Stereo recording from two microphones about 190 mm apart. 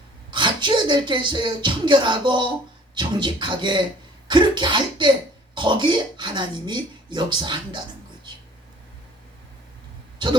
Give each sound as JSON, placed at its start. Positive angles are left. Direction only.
{"t": 0.3, "sound": "music", "side_deg": -25}
{"t": 5.5, "sound": "speech", "side_deg": -25}